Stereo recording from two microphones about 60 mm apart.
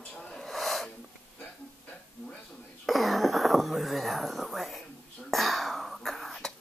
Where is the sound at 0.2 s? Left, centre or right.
Centre.